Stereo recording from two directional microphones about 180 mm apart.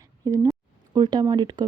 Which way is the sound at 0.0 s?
15° right (ahead or behind).